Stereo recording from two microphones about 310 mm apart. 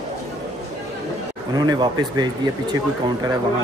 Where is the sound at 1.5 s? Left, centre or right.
Centre.